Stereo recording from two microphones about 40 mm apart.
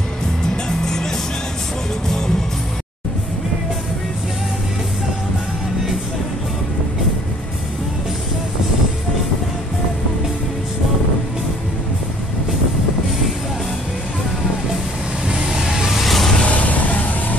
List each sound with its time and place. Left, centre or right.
0.7 s music: centre
2.0 s music: centre
15.2 s vehicle: centre
15.9 s vehicle: centre
16.4 s vehicle: left